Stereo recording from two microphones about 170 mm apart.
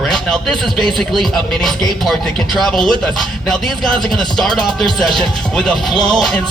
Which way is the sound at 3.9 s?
30° right (ahead or behind).